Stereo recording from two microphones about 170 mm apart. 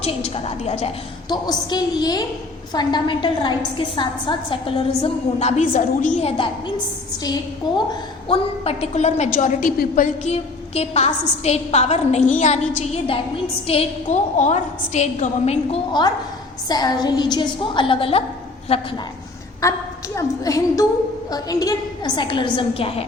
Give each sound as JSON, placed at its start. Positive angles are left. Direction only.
{"t": 0.0, "sound": "a woman's voice", "side_deg": 35}
{"t": 1.3, "sound": "a woman's voice", "side_deg": 25}
{"t": 8.3, "sound": "a woman's voice", "side_deg": 35}
{"t": 15.9, "sound": "a woman's voice", "side_deg": 25}
{"t": 19.6, "sound": "a woman's voice", "side_deg": 20}